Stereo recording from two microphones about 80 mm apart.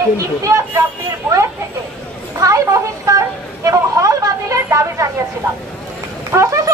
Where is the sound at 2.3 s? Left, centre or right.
Right.